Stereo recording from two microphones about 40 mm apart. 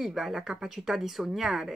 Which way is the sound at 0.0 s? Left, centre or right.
Centre.